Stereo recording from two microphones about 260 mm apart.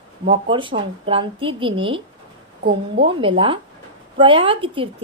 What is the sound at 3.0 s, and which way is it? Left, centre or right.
A woman's voice, centre.